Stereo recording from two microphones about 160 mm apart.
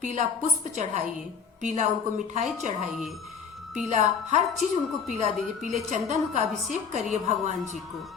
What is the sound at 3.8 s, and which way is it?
Speech, 50° right (ahead or behind).